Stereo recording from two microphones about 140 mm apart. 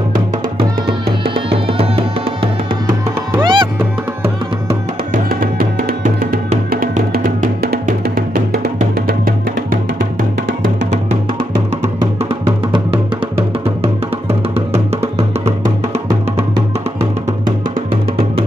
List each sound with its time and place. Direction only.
1.2 s music: 40° right (ahead or behind)
5.1 s music: 90° right
7.8 s music: 80° right
11.8 s music: 45° right (ahead or behind)